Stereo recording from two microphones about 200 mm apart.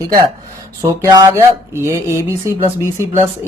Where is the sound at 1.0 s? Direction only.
20° right (ahead or behind).